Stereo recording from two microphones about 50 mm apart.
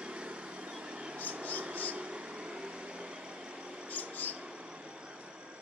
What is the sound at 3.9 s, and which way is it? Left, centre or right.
Mouse, left.